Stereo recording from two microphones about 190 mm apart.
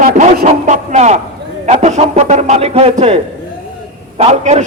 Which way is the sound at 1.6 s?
35° right (ahead or behind).